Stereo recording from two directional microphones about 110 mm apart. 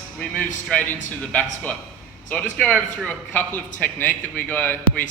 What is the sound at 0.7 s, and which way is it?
A man's voice, 10° left (ahead or behind).